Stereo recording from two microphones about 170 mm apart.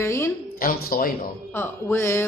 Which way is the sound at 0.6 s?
60° left (ahead or behind).